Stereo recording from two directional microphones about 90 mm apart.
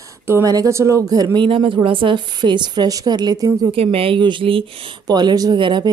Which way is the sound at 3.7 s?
90° right.